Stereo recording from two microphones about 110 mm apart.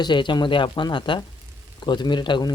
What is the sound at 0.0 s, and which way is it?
Speech, 45° left (ahead or behind).